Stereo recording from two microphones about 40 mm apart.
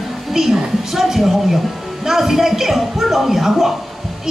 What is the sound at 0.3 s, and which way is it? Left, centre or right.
A woman's voice, centre.